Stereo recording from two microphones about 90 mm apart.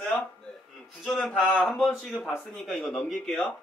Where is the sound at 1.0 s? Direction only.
5° left (ahead or behind).